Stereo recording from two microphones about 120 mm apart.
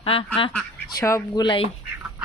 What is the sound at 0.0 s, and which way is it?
Speech, 50° left (ahead or behind).